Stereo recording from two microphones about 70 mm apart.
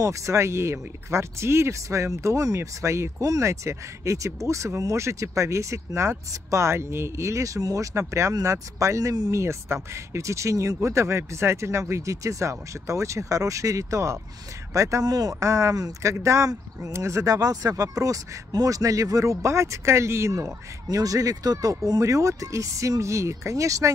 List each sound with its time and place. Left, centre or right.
0.0 s speech: right
15.4 s speech: right
22.0 s speech: right